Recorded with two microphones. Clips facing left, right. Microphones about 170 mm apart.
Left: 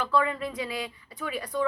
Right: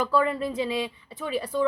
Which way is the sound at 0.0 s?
35° right (ahead or behind).